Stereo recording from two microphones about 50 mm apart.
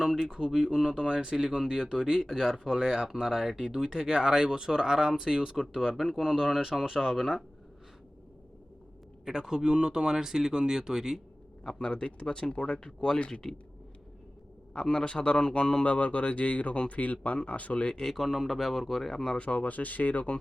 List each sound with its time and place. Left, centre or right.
0.3 s speech: centre
9.2 s speech: centre
11.6 s speech: centre
14.8 s speech: centre
15.8 s speech: left
18.0 s speech: centre
19.4 s speech: left